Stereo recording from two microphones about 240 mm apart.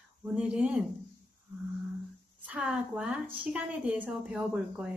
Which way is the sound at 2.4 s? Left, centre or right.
Centre.